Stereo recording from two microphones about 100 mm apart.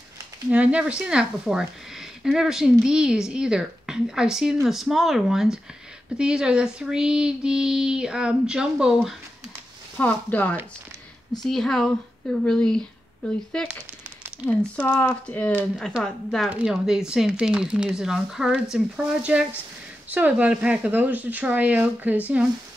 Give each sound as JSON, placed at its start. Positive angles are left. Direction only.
{"t": 0.5, "sound": "speech", "side_deg": -10}
{"t": 9.9, "sound": "speech", "side_deg": 15}
{"t": 11.4, "sound": "speech", "side_deg": 5}
{"t": 14.8, "sound": "speech", "side_deg": 20}
{"t": 16.0, "sound": "speech", "side_deg": 5}
{"t": 16.4, "sound": "speech", "side_deg": -10}